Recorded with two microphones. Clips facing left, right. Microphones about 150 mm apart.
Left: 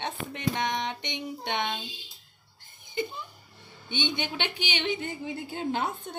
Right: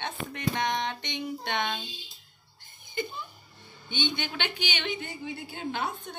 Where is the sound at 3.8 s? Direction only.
25° left (ahead or behind).